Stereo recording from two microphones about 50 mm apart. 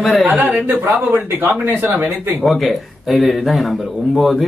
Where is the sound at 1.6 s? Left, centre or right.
Right.